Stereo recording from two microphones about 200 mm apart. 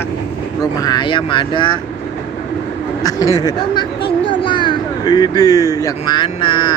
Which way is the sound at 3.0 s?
20° left (ahead or behind).